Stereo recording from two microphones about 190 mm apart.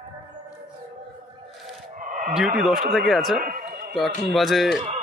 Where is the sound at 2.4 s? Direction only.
Centre (ahead or behind).